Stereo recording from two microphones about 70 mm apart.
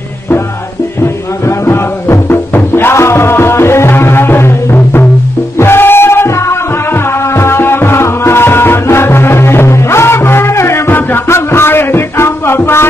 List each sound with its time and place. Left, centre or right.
1.4 s music: left